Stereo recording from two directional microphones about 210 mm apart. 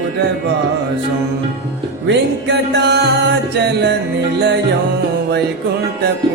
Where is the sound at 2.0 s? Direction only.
55° right (ahead or behind).